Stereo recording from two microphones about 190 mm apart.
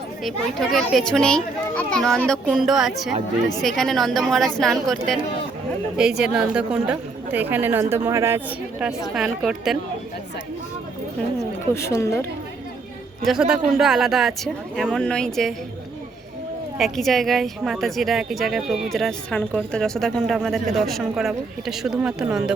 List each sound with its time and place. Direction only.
0.3 s a woman's voice: centre (ahead or behind)
6.2 s a woman's voice: 5° right (ahead or behind)
9.1 s a woman's voice: centre (ahead or behind)
11.7 s speech: 15° left (ahead or behind)
13.2 s a woman's voice: 5° right (ahead or behind)
16.7 s a woman's voice: centre (ahead or behind)